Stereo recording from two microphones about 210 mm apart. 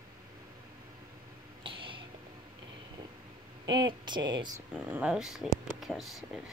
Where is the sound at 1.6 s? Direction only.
25° right (ahead or behind).